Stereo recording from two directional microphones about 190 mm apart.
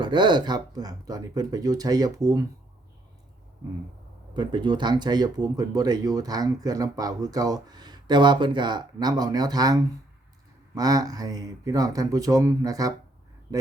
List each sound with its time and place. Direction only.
0.0 s speech: 25° right (ahead or behind)
4.4 s speech: 25° right (ahead or behind)